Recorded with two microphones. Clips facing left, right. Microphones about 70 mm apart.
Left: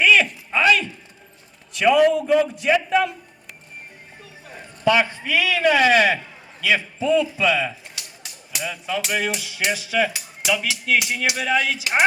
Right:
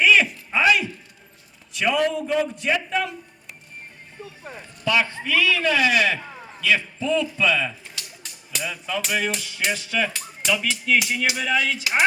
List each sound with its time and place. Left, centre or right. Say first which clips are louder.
0.0 s a sound: left 1 dB; centre
1.7 s speech: left 6 dB; centre
4.8 s a man's voice: left 4 dB; left
5.7 s speech: left 6 dB; left
6.7 s speech: left 2 dB; centre